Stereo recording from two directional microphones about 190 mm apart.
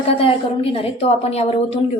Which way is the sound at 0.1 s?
30° left (ahead or behind).